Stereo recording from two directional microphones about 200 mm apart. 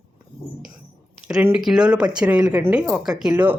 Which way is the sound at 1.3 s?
5° right (ahead or behind).